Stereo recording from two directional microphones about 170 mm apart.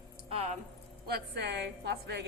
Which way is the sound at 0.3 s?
35° right (ahead or behind).